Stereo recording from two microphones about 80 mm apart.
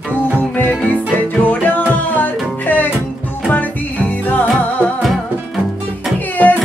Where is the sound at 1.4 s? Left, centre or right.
Left.